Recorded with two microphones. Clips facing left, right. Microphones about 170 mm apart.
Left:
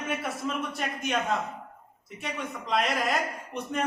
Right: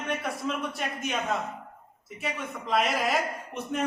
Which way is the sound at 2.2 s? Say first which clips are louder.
Right 1 dB; centre (ahead or behind).